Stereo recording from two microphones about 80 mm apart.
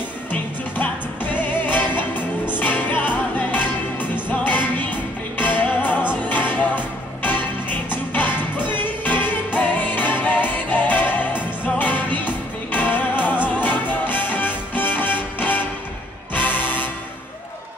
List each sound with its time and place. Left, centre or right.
0.3 s music: left
7.9 s music: left